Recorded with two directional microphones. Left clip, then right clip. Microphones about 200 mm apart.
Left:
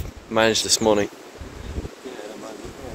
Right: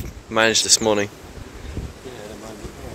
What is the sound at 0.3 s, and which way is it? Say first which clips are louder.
Speech: right 2 dB; 5° left (ahead or behind).